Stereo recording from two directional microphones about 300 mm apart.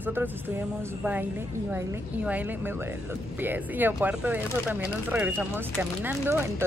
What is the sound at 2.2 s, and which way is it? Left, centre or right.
Speech, centre.